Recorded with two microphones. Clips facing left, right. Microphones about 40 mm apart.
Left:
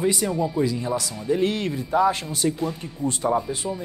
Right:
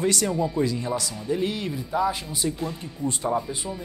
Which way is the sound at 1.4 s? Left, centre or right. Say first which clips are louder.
Left 4 dB; left.